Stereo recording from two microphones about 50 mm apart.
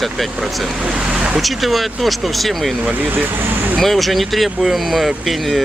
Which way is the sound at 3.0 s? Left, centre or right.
Right.